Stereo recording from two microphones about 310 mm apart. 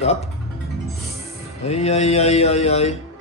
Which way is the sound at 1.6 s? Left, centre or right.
Left.